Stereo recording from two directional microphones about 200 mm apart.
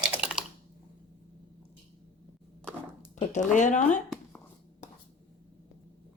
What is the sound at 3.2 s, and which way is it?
Speech, 35° left (ahead or behind).